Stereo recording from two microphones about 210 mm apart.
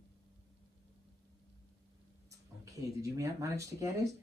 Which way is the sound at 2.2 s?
15° right (ahead or behind).